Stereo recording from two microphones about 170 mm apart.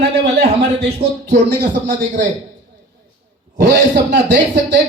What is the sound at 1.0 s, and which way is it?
Speech, 35° right (ahead or behind).